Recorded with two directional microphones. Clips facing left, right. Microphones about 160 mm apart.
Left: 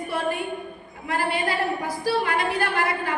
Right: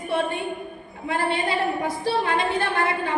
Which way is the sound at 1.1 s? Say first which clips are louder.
Right 1 dB; 25° right (ahead or behind).